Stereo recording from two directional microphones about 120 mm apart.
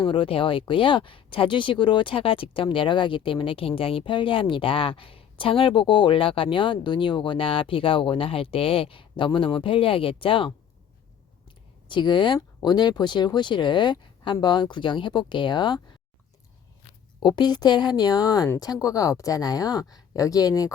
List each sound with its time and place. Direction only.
0.0 s speech: 45° left (ahead or behind)
11.9 s speech: 40° left (ahead or behind)
17.2 s a woman's voice: 35° left (ahead or behind)